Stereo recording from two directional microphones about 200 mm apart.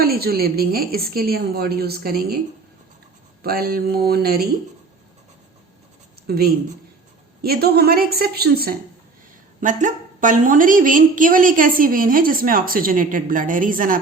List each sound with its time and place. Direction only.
0.0 s a woman's voice: 50° right (ahead or behind)
3.4 s a woman's voice: 50° right (ahead or behind)
6.2 s a woman's voice: 50° right (ahead or behind)
9.6 s a woman's voice: 40° right (ahead or behind)